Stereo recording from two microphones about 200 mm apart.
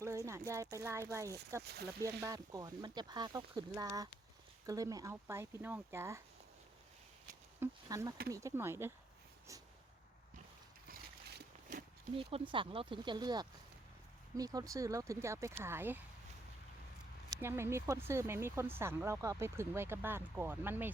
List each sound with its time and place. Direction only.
0.0 s speech: 15° right (ahead or behind)
7.6 s speech: 15° right (ahead or behind)
12.1 s speech: 25° right (ahead or behind); by 16.0 s 10° right (ahead or behind)
17.2 s speech: 15° right (ahead or behind)